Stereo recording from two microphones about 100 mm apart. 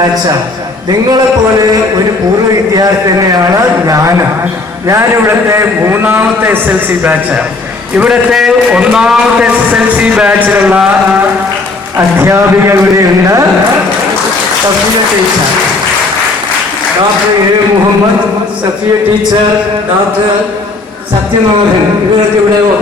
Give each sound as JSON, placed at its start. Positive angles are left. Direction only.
{"t": 2.7, "sound": "a man's voice", "side_deg": -40}
{"t": 7.9, "sound": "a man's voice", "side_deg": -5}
{"t": 11.9, "sound": "a man's voice", "side_deg": -25}